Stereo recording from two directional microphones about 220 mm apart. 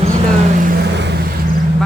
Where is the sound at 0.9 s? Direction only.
50° right (ahead or behind).